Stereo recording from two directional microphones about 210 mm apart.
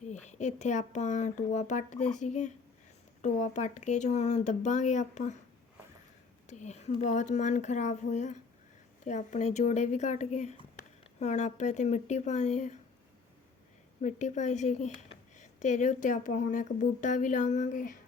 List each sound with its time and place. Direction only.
0.1 s speech: 35° left (ahead or behind)
6.5 s speech: 35° left (ahead or behind)
14.0 s speech: 35° left (ahead or behind)